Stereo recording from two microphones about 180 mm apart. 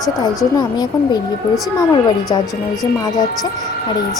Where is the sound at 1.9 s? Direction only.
25° left (ahead or behind).